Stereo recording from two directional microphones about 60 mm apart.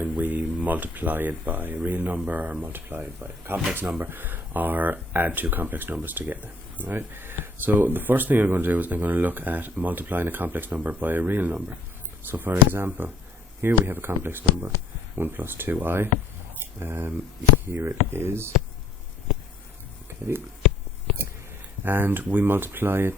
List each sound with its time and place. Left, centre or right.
0.0 s speech: right
20.2 s speech: right
21.8 s speech: right